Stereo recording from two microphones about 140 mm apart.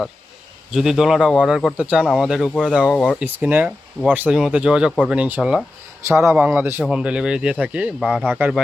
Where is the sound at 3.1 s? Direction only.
10° right (ahead or behind).